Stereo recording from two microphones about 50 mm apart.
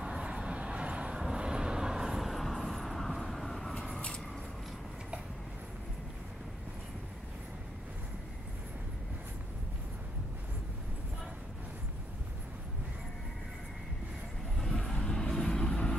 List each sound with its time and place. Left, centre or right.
0.0 s vehicle: centre
14.6 s vehicle: centre
14.9 s vehicle: centre